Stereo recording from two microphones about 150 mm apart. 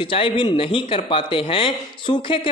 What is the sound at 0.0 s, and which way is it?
Speech, 35° left (ahead or behind).